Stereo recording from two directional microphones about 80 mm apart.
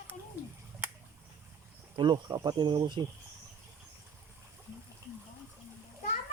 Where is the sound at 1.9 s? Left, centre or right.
Right.